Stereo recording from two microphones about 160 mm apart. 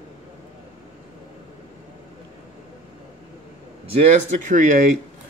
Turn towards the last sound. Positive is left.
turn(degrees=-50)  # may be behind; listen again after turning